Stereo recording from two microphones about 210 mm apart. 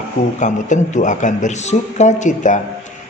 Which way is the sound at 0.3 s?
35° left (ahead or behind).